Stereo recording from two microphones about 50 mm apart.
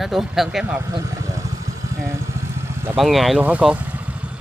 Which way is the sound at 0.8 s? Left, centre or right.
Right.